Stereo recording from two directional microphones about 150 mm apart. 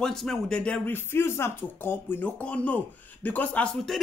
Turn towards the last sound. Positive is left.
turn(degrees=5)  # may be behind; listen again after turning